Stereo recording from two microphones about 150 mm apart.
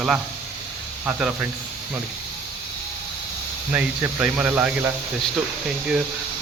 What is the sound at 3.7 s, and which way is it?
Speech, 10° right (ahead or behind).